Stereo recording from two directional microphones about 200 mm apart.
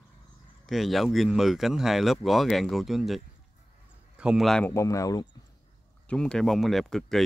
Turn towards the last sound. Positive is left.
turn(degrees=0)  # may be behind; listen again after turning